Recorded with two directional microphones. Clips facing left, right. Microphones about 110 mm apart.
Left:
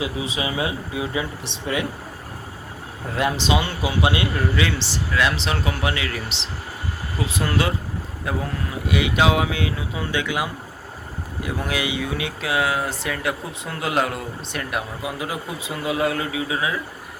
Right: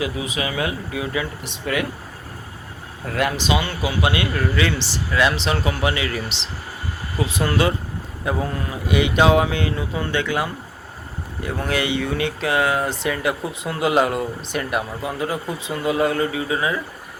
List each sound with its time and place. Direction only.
0.0 s speech: 25° left (ahead or behind)
3.2 s speech: 25° left (ahead or behind)
4.8 s speech: centre (ahead or behind)